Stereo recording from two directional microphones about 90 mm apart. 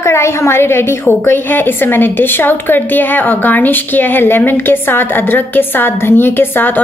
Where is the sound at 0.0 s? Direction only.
30° left (ahead or behind).